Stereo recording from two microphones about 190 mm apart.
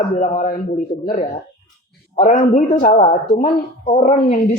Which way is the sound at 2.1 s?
40° left (ahead or behind).